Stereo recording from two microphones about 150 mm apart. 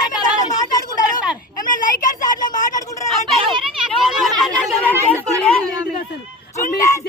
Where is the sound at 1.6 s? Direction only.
60° left (ahead or behind).